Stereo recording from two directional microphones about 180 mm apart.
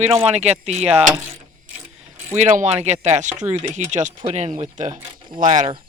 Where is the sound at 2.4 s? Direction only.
45° right (ahead or behind).